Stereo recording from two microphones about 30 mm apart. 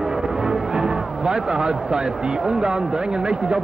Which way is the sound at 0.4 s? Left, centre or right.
Right.